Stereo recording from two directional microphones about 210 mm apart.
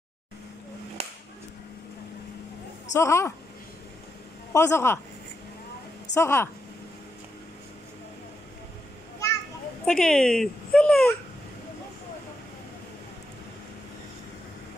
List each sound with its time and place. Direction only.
1.0 s a sound: 30° right (ahead or behind)
2.9 s a woman's voice: 15° left (ahead or behind)
4.5 s a woman's voice: 10° left (ahead or behind)
6.1 s a woman's voice: 10° left (ahead or behind)
9.8 s speech: 5° left (ahead or behind)